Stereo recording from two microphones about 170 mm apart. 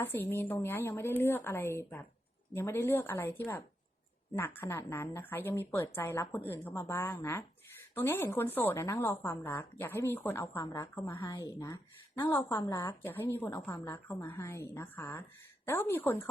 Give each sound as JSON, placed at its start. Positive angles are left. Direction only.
{"t": 0.0, "sound": "a woman's voice", "side_deg": 15}